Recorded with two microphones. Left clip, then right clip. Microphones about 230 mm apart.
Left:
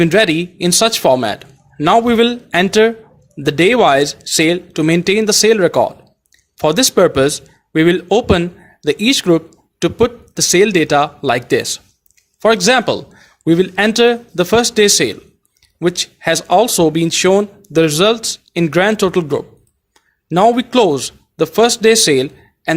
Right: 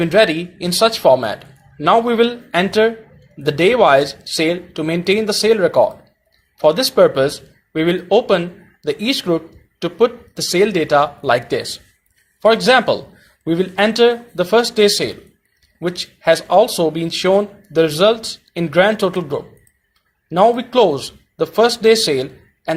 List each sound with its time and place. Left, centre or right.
0.0 s a man's voice: left